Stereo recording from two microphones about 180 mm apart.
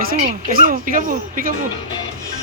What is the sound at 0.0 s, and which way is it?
Speech, 55° right (ahead or behind).